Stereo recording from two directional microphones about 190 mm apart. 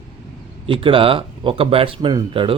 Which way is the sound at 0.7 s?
30° right (ahead or behind).